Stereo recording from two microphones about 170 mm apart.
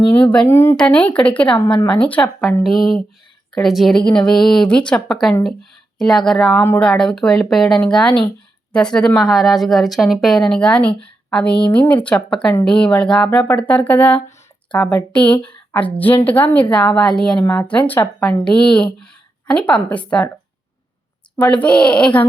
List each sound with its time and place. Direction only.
0.1 s speech: 10° left (ahead or behind)
1.5 s speech: 30° left (ahead or behind)
2.0 s a woman's voice: 10° left (ahead or behind)
17.4 s speech: 15° left (ahead or behind)
21.3 s speech: 10° left (ahead or behind)